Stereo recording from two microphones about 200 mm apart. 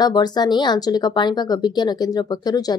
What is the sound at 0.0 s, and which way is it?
Speech, 20° left (ahead or behind).